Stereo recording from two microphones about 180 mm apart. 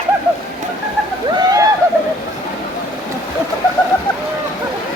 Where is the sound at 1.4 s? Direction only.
20° right (ahead or behind).